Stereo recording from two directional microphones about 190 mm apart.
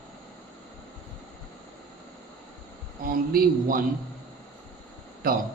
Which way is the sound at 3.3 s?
45° right (ahead or behind).